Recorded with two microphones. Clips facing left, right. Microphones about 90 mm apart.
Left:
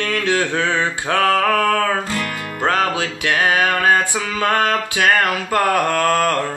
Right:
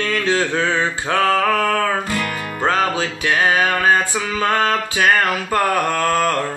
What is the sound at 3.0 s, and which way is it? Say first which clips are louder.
Music: right 1 dB; 70° left (ahead or behind).